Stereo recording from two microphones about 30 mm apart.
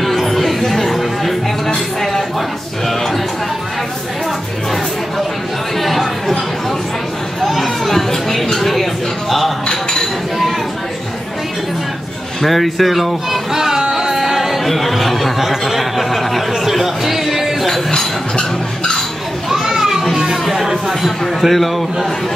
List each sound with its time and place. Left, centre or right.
0.0 s music: centre
5.8 s chatter: centre
7.4 s chatter: centre
8.5 s a sound: centre
12.4 s speech: centre
13.5 s music: centre
14.7 s a sound: centre
19.6 s children playing: centre
20.6 s a sound: centre